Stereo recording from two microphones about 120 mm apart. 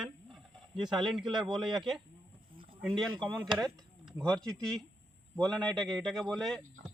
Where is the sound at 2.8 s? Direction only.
5° left (ahead or behind).